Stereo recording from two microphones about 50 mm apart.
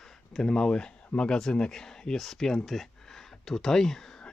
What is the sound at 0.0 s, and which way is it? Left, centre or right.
Speech, centre.